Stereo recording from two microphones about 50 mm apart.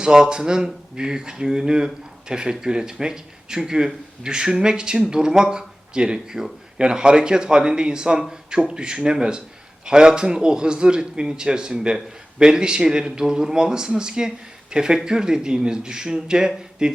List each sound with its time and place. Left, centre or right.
0.0 s speech: centre